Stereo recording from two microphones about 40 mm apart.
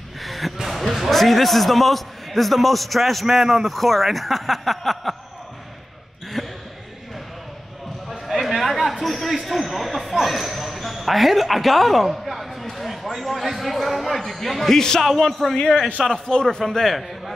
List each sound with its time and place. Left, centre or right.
0.2 s speech: centre
6.4 s a sound: centre
8.3 s a sound: centre
10.1 s speech: centre
15.0 s speech: centre
16.0 s a man's voice: centre
16.7 s a man's voice: centre